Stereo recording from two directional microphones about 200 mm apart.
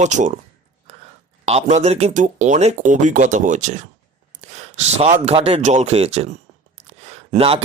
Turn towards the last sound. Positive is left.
turn(degrees=-30)  # may be behind; listen again after turning